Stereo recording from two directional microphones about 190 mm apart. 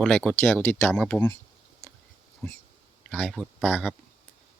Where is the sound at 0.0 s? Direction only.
5° left (ahead or behind).